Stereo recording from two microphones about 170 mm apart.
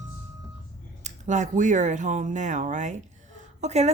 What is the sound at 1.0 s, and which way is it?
Speech, 45° right (ahead or behind).